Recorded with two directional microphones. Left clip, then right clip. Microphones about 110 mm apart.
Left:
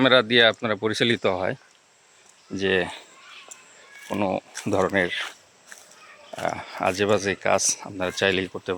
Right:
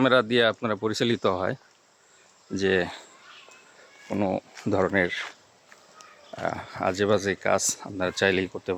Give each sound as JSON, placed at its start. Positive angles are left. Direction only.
{"t": 0.0, "sound": "speech", "side_deg": -5}
{"t": 1.2, "sound": "speech", "side_deg": -30}
{"t": 2.6, "sound": "speech", "side_deg": -40}
{"t": 4.2, "sound": "speech", "side_deg": -35}
{"t": 6.4, "sound": "speech", "side_deg": -30}
{"t": 6.7, "sound": "speech", "side_deg": -20}